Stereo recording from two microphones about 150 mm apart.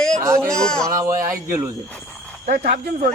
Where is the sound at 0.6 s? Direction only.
5° left (ahead or behind).